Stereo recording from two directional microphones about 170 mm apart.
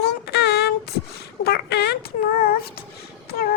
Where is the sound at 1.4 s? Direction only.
70° left (ahead or behind).